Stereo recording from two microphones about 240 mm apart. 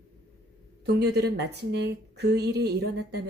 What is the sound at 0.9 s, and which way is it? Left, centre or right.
Speech, right.